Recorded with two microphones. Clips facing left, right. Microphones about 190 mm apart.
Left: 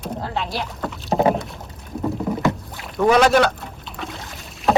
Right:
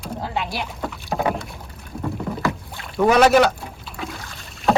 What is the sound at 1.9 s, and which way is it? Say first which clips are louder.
Rowboat: left 4 dB; 5° left (ahead or behind).